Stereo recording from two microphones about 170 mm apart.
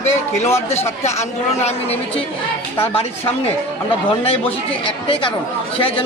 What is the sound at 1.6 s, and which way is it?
Speech, 35° left (ahead or behind).